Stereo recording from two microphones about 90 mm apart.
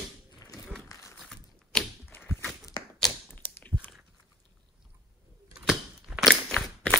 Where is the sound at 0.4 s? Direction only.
40° left (ahead or behind).